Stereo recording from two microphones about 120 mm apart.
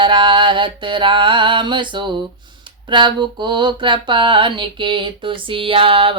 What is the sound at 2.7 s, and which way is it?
Mantra, 40° right (ahead or behind).